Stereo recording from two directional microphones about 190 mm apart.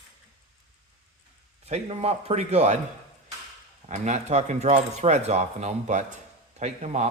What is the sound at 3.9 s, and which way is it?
Speech, 40° right (ahead or behind).